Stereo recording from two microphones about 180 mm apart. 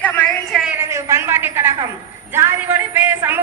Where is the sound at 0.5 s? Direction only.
5° right (ahead or behind).